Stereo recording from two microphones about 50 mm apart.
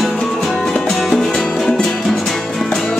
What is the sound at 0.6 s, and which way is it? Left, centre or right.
Music, centre.